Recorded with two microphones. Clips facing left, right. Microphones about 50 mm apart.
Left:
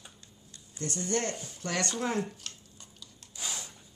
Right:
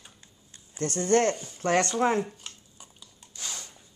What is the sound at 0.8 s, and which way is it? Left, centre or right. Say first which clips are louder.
Speech: right 9 dB; right.